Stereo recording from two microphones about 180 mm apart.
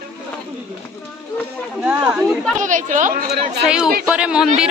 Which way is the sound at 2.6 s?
45° right (ahead or behind).